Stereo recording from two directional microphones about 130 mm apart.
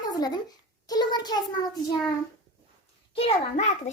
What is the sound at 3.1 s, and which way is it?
Speech, 55° left (ahead or behind).